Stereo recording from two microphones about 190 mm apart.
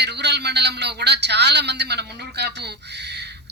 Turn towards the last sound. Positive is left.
turn(degrees=-60)  # may be behind; listen again after turning